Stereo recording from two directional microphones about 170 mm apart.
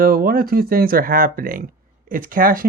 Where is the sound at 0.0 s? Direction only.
60° right (ahead or behind).